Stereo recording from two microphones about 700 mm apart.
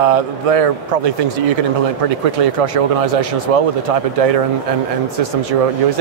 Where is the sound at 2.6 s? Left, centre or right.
Right.